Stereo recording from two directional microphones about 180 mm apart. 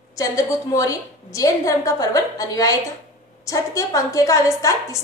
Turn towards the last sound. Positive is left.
turn(degrees=20)  # may be behind; listen again after turning